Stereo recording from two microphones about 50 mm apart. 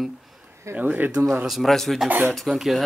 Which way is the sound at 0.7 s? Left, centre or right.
Right.